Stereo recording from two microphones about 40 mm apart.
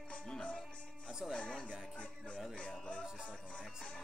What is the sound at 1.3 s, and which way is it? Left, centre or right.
Speech, left.